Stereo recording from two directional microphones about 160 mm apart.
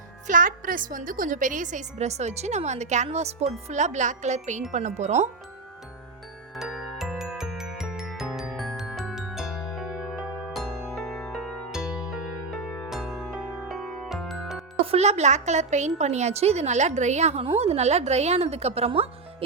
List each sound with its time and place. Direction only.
0.3 s a woman's voice: 55° right (ahead or behind)
6.6 s music: centre (ahead or behind)
14.8 s a woman's voice: 45° right (ahead or behind)